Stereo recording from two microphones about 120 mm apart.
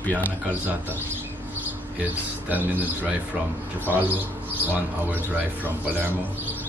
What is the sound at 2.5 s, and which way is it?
Speech, 15° right (ahead or behind).